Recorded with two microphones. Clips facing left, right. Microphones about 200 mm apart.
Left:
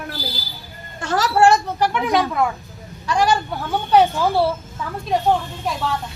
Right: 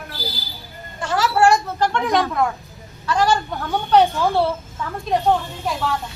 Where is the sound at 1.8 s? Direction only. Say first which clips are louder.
Even; 5° left (ahead or behind).